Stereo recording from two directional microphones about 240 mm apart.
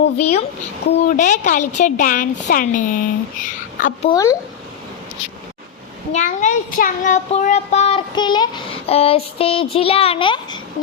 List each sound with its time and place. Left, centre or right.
0.2 s child singing: left
0.9 s speech: left
1.1 s speech: left
4.1 s speech: centre
6.1 s child singing: left